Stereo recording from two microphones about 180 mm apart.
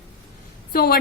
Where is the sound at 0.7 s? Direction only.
55° left (ahead or behind).